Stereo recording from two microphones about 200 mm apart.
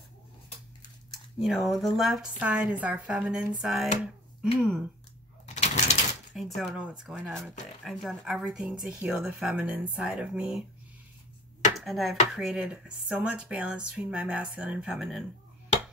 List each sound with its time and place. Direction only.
1.1 s speech: centre (ahead or behind)
5.5 s bird: 35° left (ahead or behind)
6.3 s speech: centre (ahead or behind)
11.7 s speech: centre (ahead or behind)